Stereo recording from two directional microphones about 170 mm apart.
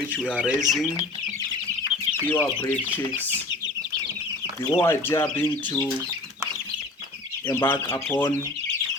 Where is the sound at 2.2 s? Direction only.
10° left (ahead or behind).